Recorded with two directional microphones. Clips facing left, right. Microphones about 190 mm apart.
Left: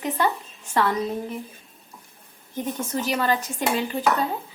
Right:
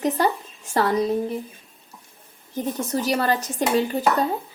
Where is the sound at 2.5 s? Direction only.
40° right (ahead or behind).